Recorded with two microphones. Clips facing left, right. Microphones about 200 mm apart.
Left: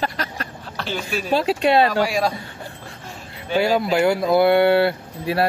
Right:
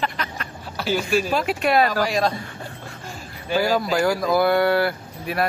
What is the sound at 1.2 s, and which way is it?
Speech, 30° left (ahead or behind).